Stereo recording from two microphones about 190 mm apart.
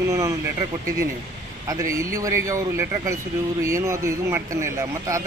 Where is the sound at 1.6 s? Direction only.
15° right (ahead or behind).